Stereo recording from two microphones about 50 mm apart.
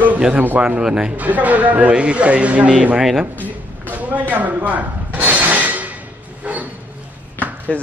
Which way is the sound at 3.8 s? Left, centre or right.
Right.